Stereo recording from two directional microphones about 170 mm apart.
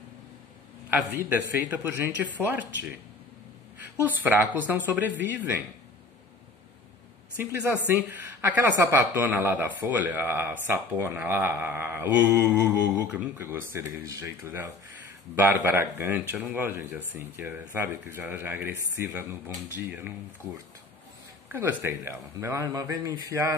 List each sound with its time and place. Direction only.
0.8 s speech: 10° right (ahead or behind)
4.0 s speech: 10° right (ahead or behind)
7.3 s speech: 10° right (ahead or behind)
21.5 s speech: 15° right (ahead or behind)